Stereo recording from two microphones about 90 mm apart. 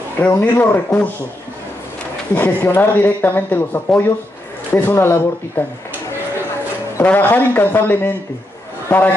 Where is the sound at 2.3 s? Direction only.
20° left (ahead or behind).